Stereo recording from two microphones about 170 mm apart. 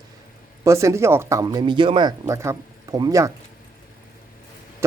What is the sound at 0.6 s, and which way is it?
Speech, 15° right (ahead or behind).